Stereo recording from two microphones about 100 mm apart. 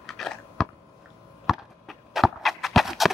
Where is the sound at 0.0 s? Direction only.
Centre (ahead or behind).